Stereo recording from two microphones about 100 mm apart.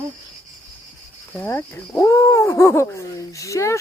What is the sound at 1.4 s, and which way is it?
Speech, 25° left (ahead or behind).